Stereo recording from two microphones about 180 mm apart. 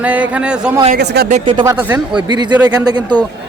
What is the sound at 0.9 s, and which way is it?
Speech, 65° right (ahead or behind).